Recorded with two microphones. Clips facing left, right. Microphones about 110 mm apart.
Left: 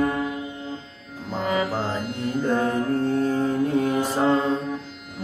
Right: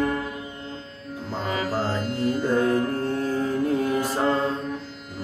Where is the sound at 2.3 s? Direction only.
Centre (ahead or behind).